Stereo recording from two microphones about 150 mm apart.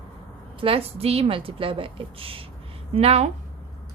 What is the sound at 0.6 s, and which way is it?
A woman's voice, 40° right (ahead or behind).